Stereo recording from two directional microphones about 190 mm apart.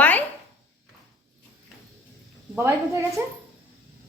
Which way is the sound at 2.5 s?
10° right (ahead or behind).